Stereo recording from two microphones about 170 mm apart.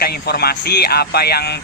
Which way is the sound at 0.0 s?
70° left (ahead or behind).